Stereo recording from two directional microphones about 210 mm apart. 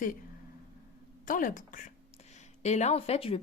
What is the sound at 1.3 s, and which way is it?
Speech, 40° left (ahead or behind).